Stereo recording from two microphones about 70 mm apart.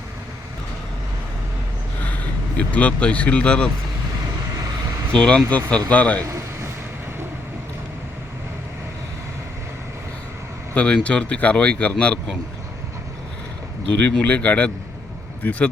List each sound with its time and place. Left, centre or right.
2.6 s speech: centre
5.1 s speech: centre
10.8 s speech: centre
13.8 s speech: centre